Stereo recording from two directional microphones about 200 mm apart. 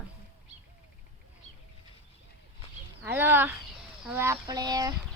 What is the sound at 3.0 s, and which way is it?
Speech, 10° right (ahead or behind).